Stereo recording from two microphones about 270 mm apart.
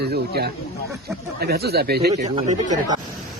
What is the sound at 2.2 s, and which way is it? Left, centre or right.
Speech, right.